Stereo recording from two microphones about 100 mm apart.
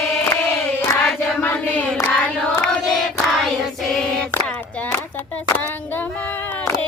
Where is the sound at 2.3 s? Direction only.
10° left (ahead or behind).